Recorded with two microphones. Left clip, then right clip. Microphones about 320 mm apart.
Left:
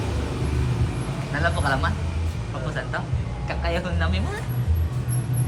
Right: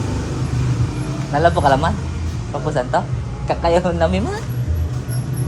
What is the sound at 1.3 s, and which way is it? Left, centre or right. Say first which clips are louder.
Speech: right 10 dB; right.